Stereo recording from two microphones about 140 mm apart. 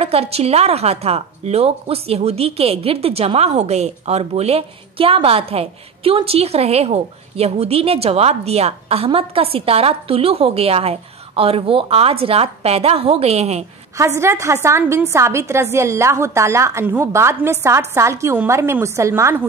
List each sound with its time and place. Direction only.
0.0 s a woman's voice: 45° right (ahead or behind)
13.9 s a woman's voice: 20° right (ahead or behind)